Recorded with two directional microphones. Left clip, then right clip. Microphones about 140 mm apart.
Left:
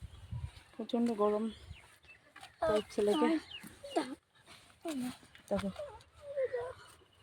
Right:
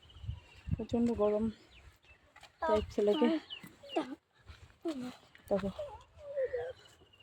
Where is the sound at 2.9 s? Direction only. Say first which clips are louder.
Right 1 dB; 40° right (ahead or behind).